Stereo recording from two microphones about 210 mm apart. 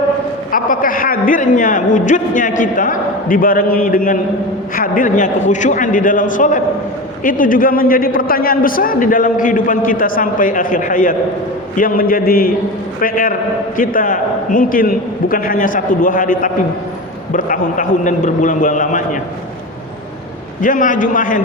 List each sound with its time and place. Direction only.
0.5 s a man's voice: 40° left (ahead or behind)
20.6 s a man's voice: 40° left (ahead or behind)